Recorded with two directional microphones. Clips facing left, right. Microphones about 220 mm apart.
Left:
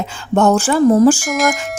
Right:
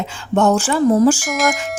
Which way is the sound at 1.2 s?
Centre (ahead or behind).